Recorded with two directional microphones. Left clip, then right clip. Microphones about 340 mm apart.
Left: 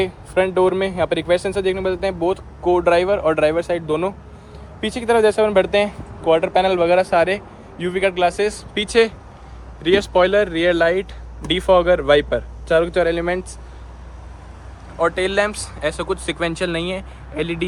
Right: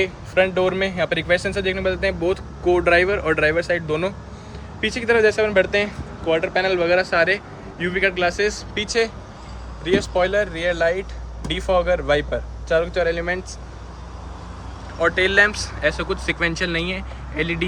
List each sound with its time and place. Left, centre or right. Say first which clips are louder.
0.0 s speech: even; centre
15.0 s speech: right 2 dB; centre